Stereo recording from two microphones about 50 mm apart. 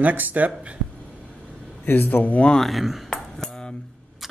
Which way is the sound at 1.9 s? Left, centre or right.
Left.